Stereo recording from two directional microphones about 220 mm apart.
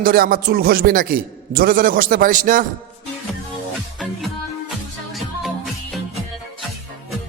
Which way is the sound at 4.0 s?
Centre (ahead or behind).